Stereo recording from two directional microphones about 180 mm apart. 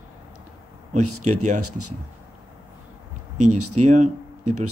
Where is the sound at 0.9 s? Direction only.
40° right (ahead or behind).